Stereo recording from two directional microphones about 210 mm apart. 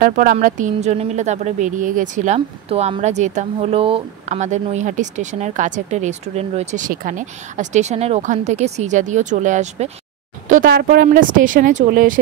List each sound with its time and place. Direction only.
0.0 s a woman's voice: 40° right (ahead or behind)